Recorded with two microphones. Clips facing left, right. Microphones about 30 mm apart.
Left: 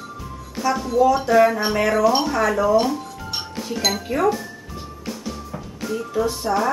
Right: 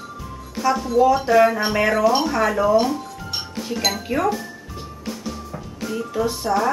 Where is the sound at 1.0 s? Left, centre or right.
Centre.